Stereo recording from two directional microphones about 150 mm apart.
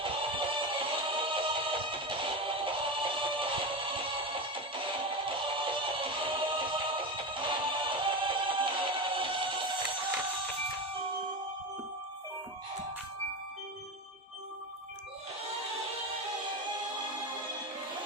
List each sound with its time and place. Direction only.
0.0 s music: 35° right (ahead or behind)